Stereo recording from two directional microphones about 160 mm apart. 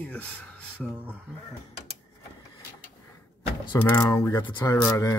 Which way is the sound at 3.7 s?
10° left (ahead or behind).